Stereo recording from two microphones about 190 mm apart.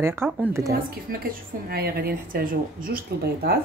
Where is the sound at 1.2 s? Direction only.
55° right (ahead or behind).